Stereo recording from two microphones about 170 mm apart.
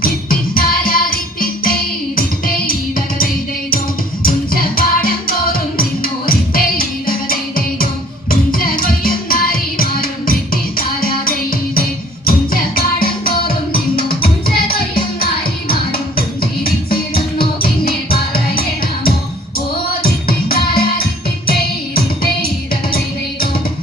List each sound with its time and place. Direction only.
0.0 s music: 60° left (ahead or behind)